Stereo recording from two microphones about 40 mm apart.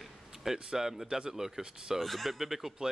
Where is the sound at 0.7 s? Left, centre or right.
Centre.